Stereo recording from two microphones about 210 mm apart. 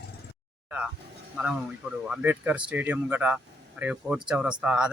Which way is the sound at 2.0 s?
5° right (ahead or behind).